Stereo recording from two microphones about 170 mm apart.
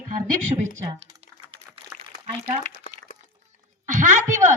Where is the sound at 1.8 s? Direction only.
35° right (ahead or behind).